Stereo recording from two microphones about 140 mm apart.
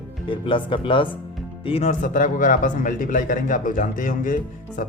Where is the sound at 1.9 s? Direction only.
70° left (ahead or behind).